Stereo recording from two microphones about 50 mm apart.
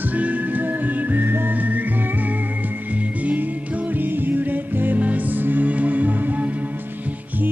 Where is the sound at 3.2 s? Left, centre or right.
Right.